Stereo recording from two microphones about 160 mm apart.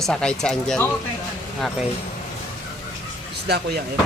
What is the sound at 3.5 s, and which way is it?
Speech, 90° right.